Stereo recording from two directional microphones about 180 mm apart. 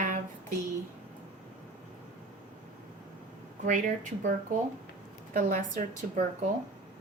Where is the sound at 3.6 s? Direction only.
45° right (ahead or behind).